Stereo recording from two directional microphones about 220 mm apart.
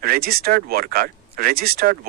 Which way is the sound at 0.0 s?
40° right (ahead or behind).